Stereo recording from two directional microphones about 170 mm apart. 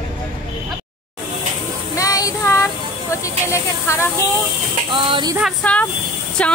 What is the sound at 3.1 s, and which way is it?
Hiss, 15° left (ahead or behind).